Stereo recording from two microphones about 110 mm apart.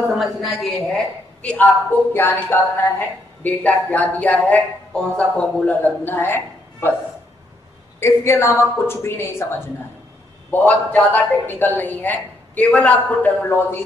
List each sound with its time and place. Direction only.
0.0 s a woman's voice: 5° right (ahead or behind)
1.4 s a woman's voice: 10° left (ahead or behind)
8.0 s a woman's voice: 25° left (ahead or behind)
10.5 s speech: 15° left (ahead or behind)